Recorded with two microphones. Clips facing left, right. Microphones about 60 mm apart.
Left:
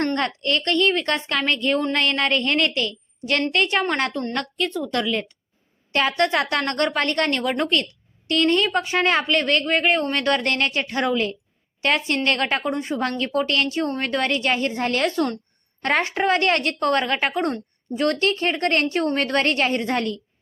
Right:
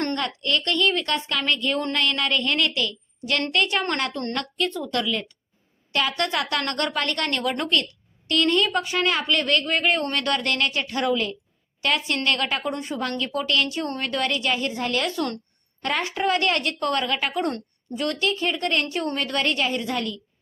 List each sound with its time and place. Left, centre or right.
0.2 s speech: left